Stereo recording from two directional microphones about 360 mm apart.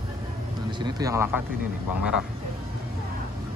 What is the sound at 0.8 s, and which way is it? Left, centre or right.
Speech, centre.